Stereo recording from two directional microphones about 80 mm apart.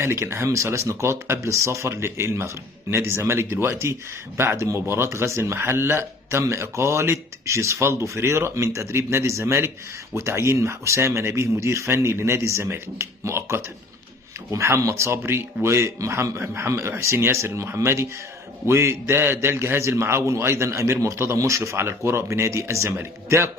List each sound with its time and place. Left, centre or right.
0.0 s speech: right